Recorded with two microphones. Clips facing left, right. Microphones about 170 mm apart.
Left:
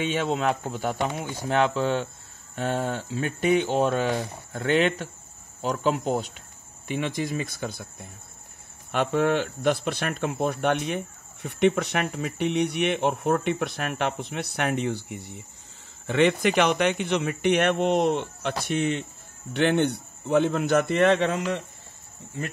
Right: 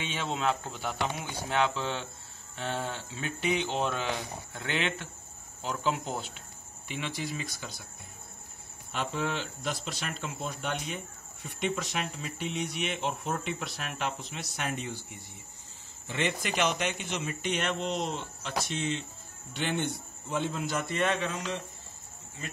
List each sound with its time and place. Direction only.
0.0 s speech: 45° left (ahead or behind); by 21.4 s 65° left (ahead or behind)